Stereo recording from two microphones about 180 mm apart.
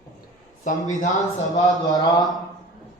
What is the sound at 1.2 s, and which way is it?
Speech, 20° left (ahead or behind).